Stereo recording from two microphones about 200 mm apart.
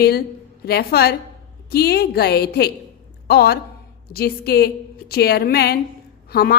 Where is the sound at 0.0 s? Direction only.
50° left (ahead or behind).